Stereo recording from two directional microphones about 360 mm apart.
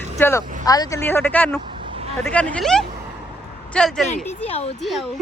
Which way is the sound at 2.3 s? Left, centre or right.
Centre.